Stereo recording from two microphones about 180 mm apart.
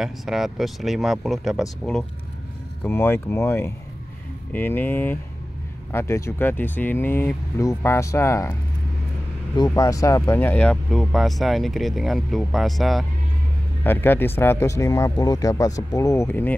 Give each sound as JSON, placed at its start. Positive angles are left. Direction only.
{"t": 0.0, "sound": "speech", "side_deg": 0}
{"t": 2.8, "sound": "speech", "side_deg": 10}
{"t": 9.6, "sound": "speech", "side_deg": 20}
{"t": 13.8, "sound": "speech", "side_deg": 10}